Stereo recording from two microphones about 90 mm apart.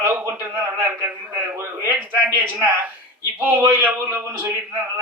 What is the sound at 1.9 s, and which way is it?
A man's voice, 20° right (ahead or behind).